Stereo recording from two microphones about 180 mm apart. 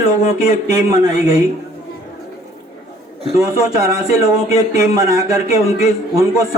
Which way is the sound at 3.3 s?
20° right (ahead or behind).